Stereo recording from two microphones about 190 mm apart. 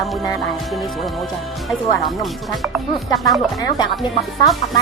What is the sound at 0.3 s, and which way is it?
Speech, centre (ahead or behind).